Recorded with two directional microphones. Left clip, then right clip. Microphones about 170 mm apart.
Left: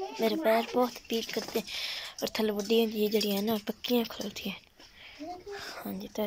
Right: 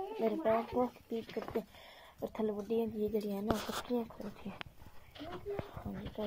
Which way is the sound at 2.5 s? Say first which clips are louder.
Left 8 dB; 15° left (ahead or behind).